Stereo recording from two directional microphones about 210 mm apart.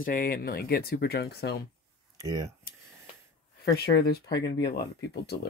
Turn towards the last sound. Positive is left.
turn(degrees=55)  # may be behind; listen again after turning